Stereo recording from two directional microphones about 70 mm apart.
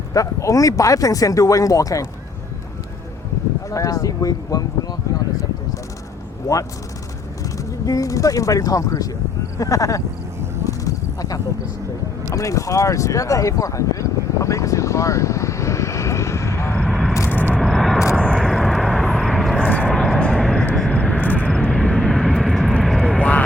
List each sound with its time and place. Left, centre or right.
0.1 s speech: left
3.7 s speech: left
7.9 s speech: left
10.6 s a sound: left
16.8 s vehicle: centre
17.2 s vehicle: left
17.6 s vehicle: centre
18.4 s vehicle: centre
19.5 s vehicle: left
19.9 s vehicle: centre
20.1 s vehicle: centre
20.9 s vehicle: left
21.7 s vehicle: centre
23.1 s vehicle: centre